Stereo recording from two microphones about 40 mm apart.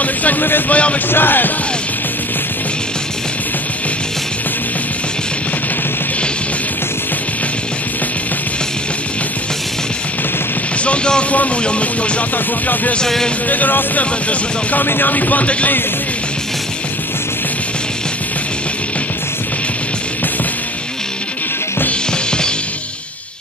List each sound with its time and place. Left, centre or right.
0.0 s speech: left
0.7 s speech: left
1.1 s music: left
10.8 s speech: left
13.5 s speech: left